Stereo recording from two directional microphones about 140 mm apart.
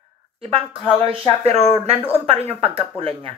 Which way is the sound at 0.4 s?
40° right (ahead or behind).